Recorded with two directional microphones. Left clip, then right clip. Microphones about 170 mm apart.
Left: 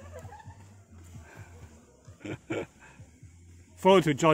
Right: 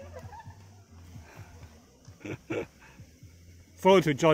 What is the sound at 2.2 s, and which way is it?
Dog, 5° left (ahead or behind).